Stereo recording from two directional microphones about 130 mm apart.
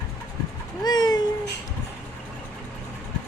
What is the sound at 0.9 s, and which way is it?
Cat, 30° left (ahead or behind).